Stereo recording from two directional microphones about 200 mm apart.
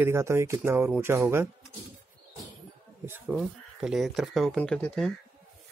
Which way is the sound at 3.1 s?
5° right (ahead or behind).